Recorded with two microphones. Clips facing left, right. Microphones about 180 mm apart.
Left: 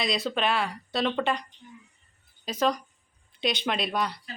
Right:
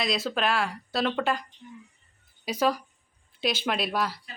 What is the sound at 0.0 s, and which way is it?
Speech, centre (ahead or behind).